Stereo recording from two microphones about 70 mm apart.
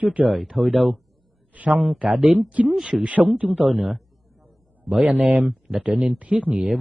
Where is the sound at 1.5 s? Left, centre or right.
Right.